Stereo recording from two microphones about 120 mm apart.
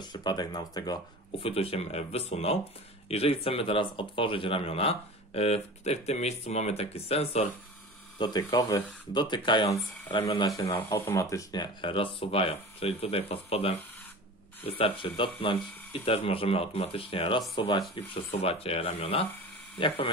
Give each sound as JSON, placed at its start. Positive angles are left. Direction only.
{"t": 0.0, "sound": "speech", "side_deg": 35}
{"t": 1.4, "sound": "speech", "side_deg": 55}
{"t": 8.2, "sound": "speech", "side_deg": 35}
{"t": 10.7, "sound": "speech", "side_deg": 25}
{"t": 17.6, "sound": "speech", "side_deg": 35}
{"t": 17.9, "sound": "speech", "side_deg": 50}